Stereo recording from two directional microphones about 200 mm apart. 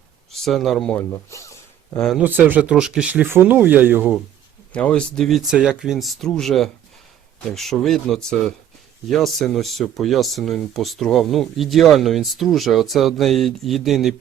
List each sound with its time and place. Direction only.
0.3 s speech: centre (ahead or behind)
1.3 s a sound: 15° left (ahead or behind)
2.0 s speech: 5° right (ahead or behind)
4.7 s speech: 5° left (ahead or behind)